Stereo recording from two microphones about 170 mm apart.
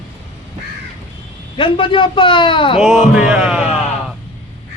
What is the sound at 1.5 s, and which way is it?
A man's voice, 30° left (ahead or behind).